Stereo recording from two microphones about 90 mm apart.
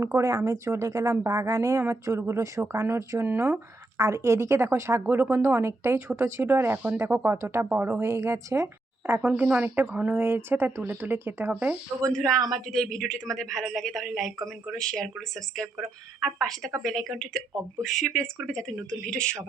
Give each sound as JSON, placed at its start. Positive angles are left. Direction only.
{"t": 0.0, "sound": "a woman's voice", "side_deg": -30}
{"t": 9.2, "sound": "speech", "side_deg": -15}
{"t": 12.1, "sound": "a woman's voice", "side_deg": 10}